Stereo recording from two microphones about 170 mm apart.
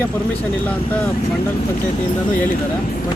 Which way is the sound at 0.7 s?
10° left (ahead or behind).